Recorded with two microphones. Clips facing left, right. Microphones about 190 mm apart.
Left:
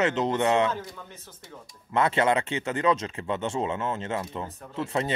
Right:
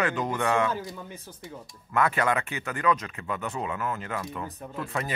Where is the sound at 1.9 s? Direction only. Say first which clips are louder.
Left 2 dB; 25° left (ahead or behind).